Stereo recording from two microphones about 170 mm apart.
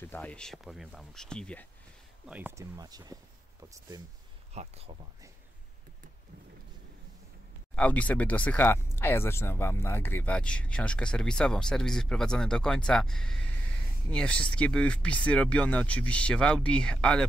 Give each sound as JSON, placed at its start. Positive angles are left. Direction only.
{"t": 0.0, "sound": "speech", "side_deg": 10}
{"t": 2.2, "sound": "speech", "side_deg": -10}
{"t": 4.6, "sound": "speech", "side_deg": -35}
{"t": 7.7, "sound": "speech", "side_deg": 10}